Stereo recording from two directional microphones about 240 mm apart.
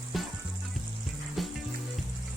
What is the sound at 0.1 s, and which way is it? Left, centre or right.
Music, centre.